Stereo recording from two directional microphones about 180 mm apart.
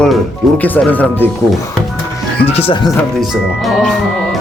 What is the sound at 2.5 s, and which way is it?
Speech, 30° left (ahead or behind).